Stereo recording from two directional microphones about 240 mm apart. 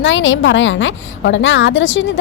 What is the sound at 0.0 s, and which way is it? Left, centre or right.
A woman's voice, left.